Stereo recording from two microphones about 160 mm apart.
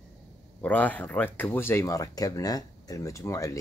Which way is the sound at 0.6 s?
10° left (ahead or behind).